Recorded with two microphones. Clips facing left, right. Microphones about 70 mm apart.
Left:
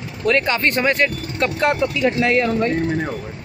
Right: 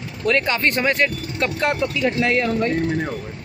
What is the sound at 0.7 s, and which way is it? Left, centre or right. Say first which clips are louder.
A man's voice: left 1 dB; left.